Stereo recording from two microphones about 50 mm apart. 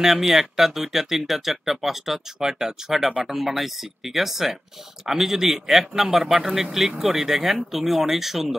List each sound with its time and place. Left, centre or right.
0.0 s speech: centre